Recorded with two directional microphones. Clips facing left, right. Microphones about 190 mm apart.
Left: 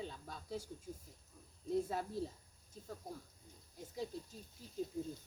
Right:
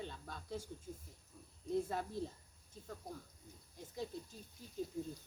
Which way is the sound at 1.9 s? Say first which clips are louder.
Left 1 dB; 5° left (ahead or behind).